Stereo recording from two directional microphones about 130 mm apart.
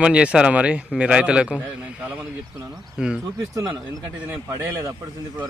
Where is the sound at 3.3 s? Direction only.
25° right (ahead or behind).